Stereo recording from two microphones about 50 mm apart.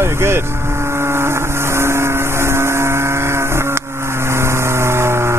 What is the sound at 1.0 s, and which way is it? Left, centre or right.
Vehicle, right.